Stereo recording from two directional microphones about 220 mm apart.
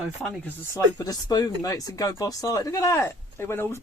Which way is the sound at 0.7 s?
15° left (ahead or behind).